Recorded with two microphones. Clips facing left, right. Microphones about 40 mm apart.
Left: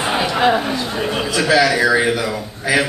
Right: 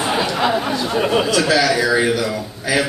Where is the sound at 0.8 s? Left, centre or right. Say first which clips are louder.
Right 4 dB; centre.